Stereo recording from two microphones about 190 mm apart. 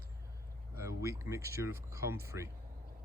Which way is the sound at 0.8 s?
15° right (ahead or behind).